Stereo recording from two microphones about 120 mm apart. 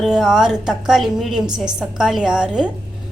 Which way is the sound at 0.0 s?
5° right (ahead or behind).